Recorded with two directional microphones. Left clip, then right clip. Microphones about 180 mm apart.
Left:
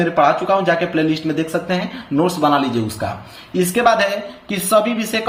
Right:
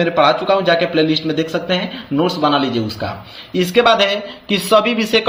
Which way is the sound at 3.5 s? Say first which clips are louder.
Right 2 dB; 20° right (ahead or behind).